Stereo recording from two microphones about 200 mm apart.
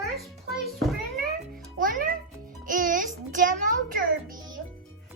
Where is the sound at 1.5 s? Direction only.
45° right (ahead or behind).